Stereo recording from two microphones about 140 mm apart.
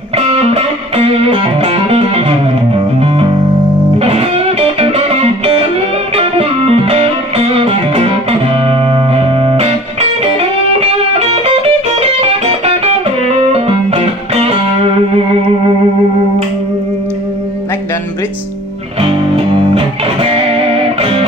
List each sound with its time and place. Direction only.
0.3 s music: 45° right (ahead or behind)
18.9 s music: 45° right (ahead or behind)